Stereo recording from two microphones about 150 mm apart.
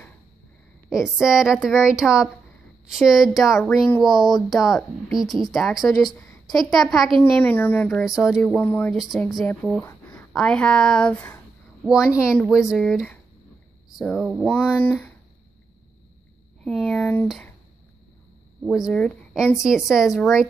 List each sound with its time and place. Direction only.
0.8 s speech: 5° right (ahead or behind)
7.2 s a woman's voice: 15° left (ahead or behind)
8.0 s speech: 5° right (ahead or behind)
8.5 s a woman's voice: 15° left (ahead or behind)
8.9 s speech: centre (ahead or behind)
9.8 s a sound: 15° left (ahead or behind)
10.3 s a woman's voice: 5° left (ahead or behind)
11.8 s a woman's voice: 5° right (ahead or behind)
16.6 s a woman's voice: 5° left (ahead or behind)
18.7 s a woman's voice: 5° left (ahead or behind)